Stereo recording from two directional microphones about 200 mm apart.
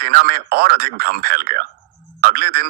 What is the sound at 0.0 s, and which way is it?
Speech, 50° right (ahead or behind).